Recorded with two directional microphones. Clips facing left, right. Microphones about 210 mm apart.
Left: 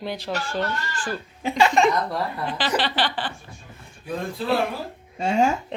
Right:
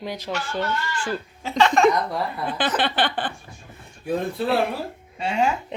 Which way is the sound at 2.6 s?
55° right (ahead or behind).